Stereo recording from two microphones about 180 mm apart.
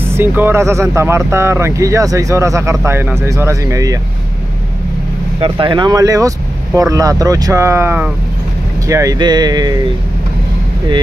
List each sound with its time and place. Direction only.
0.1 s speech: 10° right (ahead or behind)
5.4 s speech: 25° right (ahead or behind)